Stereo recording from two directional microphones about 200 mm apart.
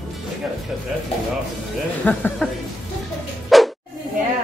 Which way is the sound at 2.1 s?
5° left (ahead or behind).